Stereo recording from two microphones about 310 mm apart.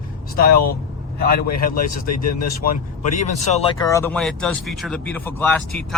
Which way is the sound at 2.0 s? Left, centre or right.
Left.